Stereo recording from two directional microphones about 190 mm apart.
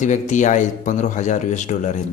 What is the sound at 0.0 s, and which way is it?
Speech, 40° left (ahead or behind).